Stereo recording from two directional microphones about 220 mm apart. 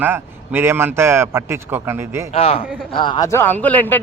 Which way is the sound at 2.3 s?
25° left (ahead or behind).